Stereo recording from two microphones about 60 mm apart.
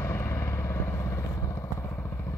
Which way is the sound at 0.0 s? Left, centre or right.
Left.